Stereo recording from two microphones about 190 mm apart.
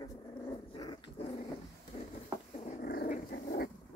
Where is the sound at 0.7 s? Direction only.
25° left (ahead or behind).